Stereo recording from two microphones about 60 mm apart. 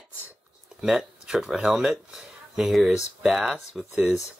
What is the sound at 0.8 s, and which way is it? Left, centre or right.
Speech, centre.